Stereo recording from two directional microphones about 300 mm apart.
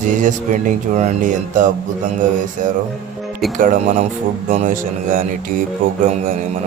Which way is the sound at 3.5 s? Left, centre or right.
Right.